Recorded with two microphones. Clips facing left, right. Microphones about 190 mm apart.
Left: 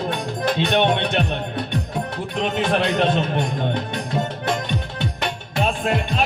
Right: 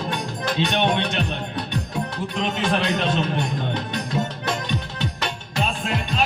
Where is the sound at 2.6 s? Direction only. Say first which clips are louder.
Left 4 dB; 55° left (ahead or behind).